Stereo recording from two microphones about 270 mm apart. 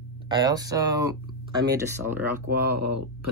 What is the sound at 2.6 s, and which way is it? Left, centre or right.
Speech, right.